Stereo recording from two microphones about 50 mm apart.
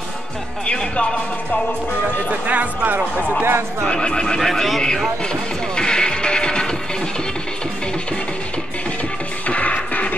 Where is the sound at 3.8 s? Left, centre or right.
Centre.